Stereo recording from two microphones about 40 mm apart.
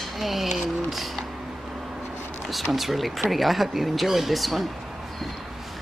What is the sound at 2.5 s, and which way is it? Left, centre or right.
Speech, centre.